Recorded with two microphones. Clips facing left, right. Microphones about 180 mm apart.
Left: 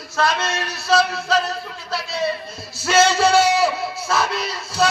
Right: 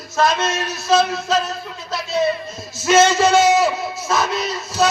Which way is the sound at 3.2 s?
30° left (ahead or behind).